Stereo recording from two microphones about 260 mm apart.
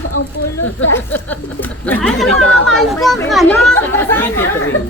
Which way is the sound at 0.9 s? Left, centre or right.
Centre.